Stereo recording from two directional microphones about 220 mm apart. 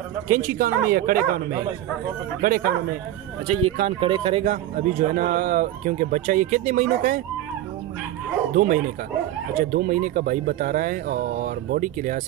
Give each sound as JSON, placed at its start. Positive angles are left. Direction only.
{"t": 0.3, "sound": "a man's voice", "side_deg": -40}
{"t": 8.5, "sound": "a man's voice", "side_deg": -40}